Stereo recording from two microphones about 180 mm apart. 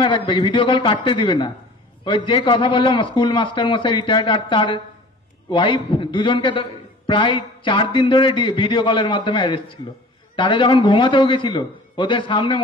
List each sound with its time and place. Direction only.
0.0 s a man's voice: 25° left (ahead or behind)